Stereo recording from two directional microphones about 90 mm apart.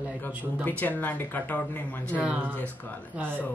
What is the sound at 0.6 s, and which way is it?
Speech, 15° left (ahead or behind).